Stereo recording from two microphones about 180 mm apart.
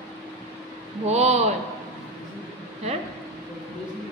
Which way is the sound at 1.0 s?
35° right (ahead or behind).